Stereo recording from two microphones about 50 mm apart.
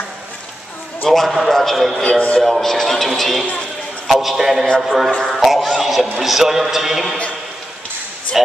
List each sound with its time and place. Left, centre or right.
1.0 s a man's voice: centre
2.0 s speech: left
2.4 s a man's voice: centre